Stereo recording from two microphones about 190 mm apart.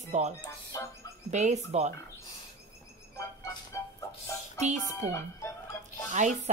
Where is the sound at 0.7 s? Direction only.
20° left (ahead or behind).